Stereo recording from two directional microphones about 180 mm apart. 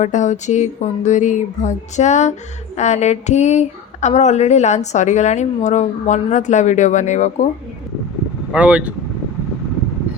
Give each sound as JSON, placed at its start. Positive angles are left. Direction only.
{"t": 0.0, "sound": "speech", "side_deg": 40}
{"t": 8.5, "sound": "speech", "side_deg": -5}